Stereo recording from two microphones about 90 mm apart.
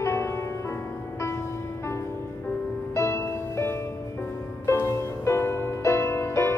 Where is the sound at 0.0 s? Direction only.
30° left (ahead or behind).